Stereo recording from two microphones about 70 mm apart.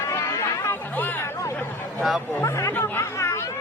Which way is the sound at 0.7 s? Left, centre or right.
Left.